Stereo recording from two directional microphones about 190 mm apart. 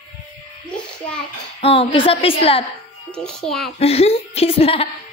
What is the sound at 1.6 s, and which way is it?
A woman's voice, 30° left (ahead or behind).